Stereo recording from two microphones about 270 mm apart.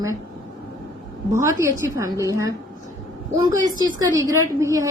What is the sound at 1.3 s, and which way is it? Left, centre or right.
A woman's voice, centre.